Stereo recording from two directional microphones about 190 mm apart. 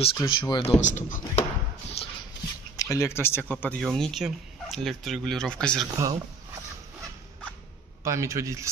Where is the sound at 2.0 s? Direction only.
30° left (ahead or behind).